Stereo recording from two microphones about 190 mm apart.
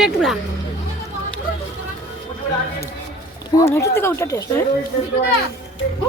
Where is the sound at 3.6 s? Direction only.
15° left (ahead or behind).